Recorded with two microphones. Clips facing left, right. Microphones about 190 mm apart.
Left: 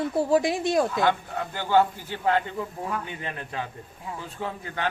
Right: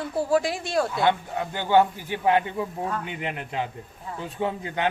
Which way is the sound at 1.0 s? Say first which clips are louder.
Right 1 dB; 15° right (ahead or behind).